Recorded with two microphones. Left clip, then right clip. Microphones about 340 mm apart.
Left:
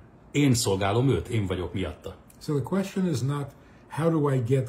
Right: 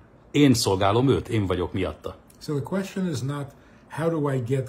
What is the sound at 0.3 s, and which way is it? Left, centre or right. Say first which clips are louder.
Speech: right 4 dB; right.